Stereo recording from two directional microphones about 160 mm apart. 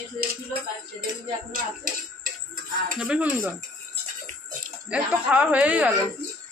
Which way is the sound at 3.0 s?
10° right (ahead or behind).